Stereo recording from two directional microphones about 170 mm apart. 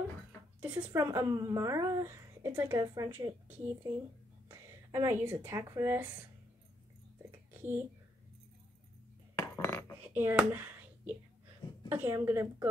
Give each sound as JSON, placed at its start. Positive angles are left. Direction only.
{"t": 0.6, "sound": "speech", "side_deg": -10}
{"t": 1.0, "sound": "a woman's voice", "side_deg": -20}
{"t": 7.2, "sound": "whispering", "side_deg": -10}
{"t": 9.6, "sound": "cutlery", "side_deg": 10}
{"t": 10.1, "sound": "a woman's voice", "side_deg": -10}